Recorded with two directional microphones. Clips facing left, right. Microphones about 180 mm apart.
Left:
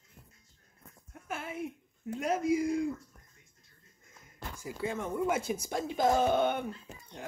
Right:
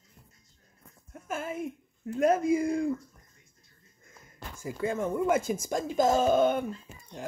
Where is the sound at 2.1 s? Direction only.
50° right (ahead or behind).